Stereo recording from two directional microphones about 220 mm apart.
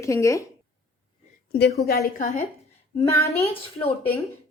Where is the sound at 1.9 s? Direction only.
45° left (ahead or behind).